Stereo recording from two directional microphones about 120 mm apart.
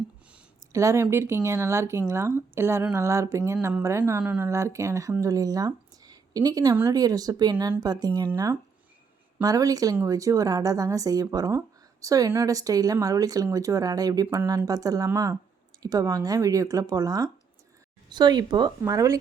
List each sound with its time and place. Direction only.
0.7 s speech: 25° right (ahead or behind)
4.2 s speech: 10° right (ahead or behind)
4.4 s speech: 25° right (ahead or behind)
9.4 s speech: 30° right (ahead or behind)